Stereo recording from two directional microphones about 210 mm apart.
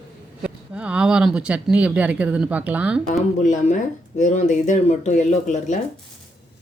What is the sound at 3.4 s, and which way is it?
Speech, 35° left (ahead or behind).